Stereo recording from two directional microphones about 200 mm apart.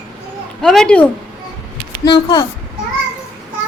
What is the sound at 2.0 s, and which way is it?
Speech, 20° left (ahead or behind).